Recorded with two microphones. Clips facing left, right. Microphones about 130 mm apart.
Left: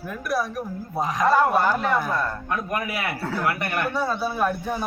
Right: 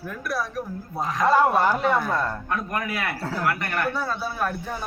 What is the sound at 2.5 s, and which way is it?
Speech, 15° left (ahead or behind).